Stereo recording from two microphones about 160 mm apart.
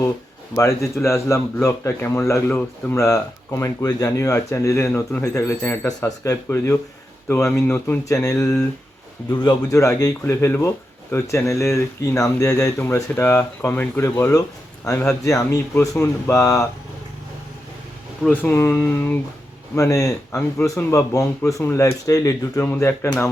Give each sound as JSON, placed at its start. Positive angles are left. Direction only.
{"t": 0.5, "sound": "speech", "side_deg": 15}
{"t": 9.3, "sound": "speech", "side_deg": 25}
{"t": 18.2, "sound": "speech", "side_deg": 10}